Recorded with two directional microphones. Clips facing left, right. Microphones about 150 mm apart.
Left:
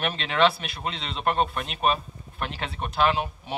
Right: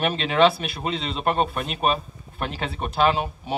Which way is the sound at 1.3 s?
5° right (ahead or behind).